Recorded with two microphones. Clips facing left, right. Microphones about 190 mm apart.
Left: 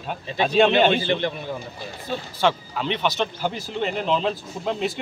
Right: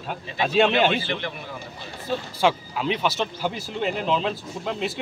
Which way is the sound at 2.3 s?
5° right (ahead or behind).